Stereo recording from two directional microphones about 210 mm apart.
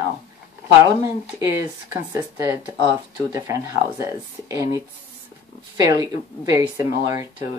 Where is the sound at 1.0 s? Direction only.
15° right (ahead or behind).